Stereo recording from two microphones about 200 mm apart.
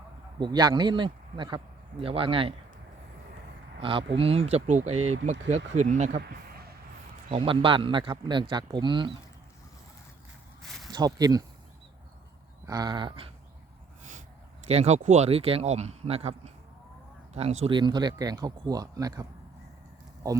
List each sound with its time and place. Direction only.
0.3 s a man's voice: 20° right (ahead or behind)
3.8 s speech: 25° right (ahead or behind)
4.9 s speech: 90° right
5.2 s speech: 35° right (ahead or behind)
6.1 s a sound: 50° right (ahead or behind)
7.3 s speech: 25° right (ahead or behind)
10.6 s a sound: centre (ahead or behind)
10.9 s speech: 20° right (ahead or behind)
12.6 s speech: 20° right (ahead or behind)
14.7 s speech: 35° right (ahead or behind); by 19.2 s 20° right (ahead or behind)
20.2 s speech: 20° right (ahead or behind)